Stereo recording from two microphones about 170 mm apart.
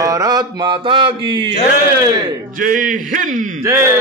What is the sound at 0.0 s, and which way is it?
Mantra, 20° right (ahead or behind).